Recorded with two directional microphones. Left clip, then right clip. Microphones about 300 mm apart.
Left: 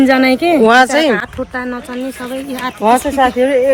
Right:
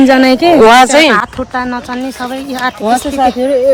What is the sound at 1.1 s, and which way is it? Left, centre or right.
Speech, right.